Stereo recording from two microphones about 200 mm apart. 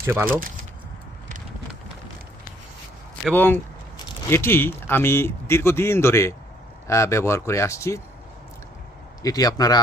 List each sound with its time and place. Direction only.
0.0 s speech: 10° right (ahead or behind)
3.2 s speech: 10° left (ahead or behind)
9.2 s speech: 20° left (ahead or behind)